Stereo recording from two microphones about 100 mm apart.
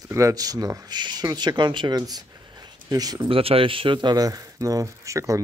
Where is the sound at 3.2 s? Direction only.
65° right (ahead or behind).